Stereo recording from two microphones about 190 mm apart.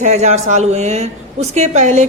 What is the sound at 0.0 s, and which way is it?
A woman's voice, 35° right (ahead or behind).